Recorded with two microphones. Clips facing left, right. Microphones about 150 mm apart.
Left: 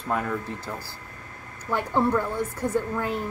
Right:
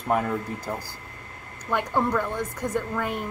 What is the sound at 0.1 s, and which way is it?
Speech, 20° right (ahead or behind).